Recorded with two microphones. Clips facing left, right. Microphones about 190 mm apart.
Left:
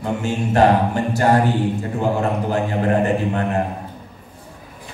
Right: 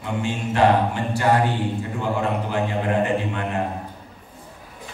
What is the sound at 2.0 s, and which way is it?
Speech, 45° left (ahead or behind).